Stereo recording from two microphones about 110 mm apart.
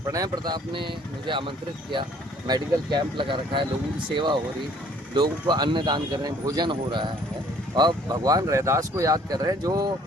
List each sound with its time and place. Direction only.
0.1 s speech: 35° right (ahead or behind)